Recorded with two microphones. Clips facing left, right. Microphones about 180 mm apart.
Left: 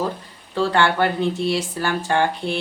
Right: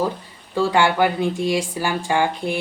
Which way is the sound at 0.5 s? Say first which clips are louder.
Right 1 dB; 10° right (ahead or behind).